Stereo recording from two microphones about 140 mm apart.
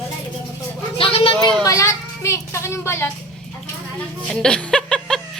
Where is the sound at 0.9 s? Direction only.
40° left (ahead or behind).